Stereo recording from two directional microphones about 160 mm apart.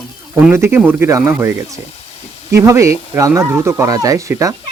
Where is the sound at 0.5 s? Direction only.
15° right (ahead or behind).